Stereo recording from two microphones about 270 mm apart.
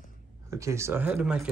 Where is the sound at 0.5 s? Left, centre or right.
Centre.